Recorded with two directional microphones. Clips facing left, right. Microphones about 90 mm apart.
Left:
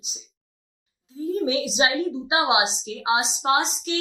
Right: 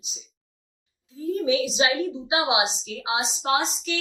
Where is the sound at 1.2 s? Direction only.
30° left (ahead or behind).